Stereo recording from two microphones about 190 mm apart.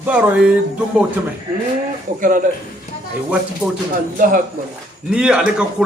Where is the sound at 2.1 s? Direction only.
45° right (ahead or behind).